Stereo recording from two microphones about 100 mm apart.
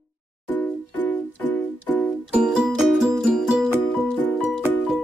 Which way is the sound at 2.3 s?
5° right (ahead or behind).